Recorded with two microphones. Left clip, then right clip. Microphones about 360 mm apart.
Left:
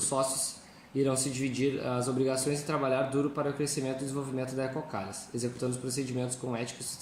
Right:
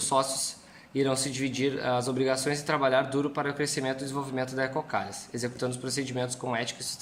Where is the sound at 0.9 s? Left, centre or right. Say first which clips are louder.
Right 2 dB; right.